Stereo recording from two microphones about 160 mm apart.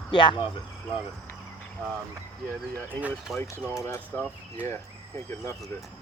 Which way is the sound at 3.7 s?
15° left (ahead or behind).